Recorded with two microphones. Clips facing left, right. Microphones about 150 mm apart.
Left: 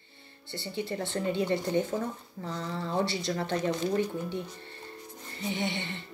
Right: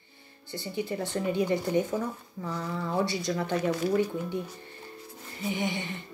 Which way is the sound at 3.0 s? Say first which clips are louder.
Right 1 dB; 25° left (ahead or behind).